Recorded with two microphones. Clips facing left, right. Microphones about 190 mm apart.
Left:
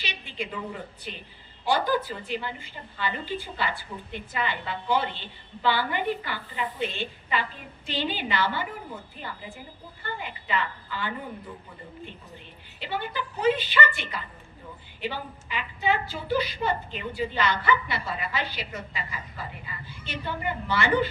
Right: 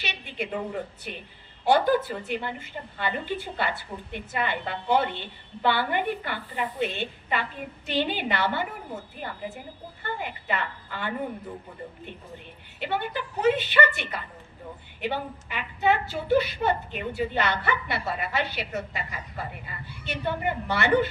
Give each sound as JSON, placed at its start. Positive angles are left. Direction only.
{"t": 0.0, "sound": "a woman's voice", "side_deg": -60}
{"t": 10.2, "sound": "a woman's voice", "side_deg": -55}
{"t": 12.8, "sound": "a woman's voice", "side_deg": -60}